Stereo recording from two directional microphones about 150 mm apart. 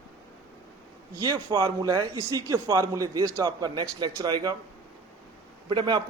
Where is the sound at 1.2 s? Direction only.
25° right (ahead or behind).